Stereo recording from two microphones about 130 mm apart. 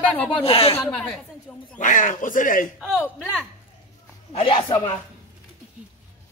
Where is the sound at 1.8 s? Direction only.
80° left.